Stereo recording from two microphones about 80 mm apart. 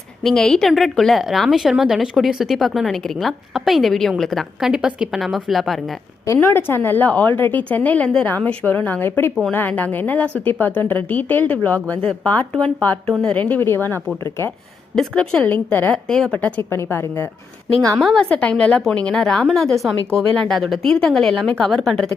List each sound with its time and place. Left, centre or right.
0.2 s a woman's voice: centre
4.7 s a woman's voice: centre
6.4 s a woman's voice: left
14.9 s a woman's voice: centre
16.0 s speech: centre
16.6 s a woman's voice: left
17.9 s a woman's voice: centre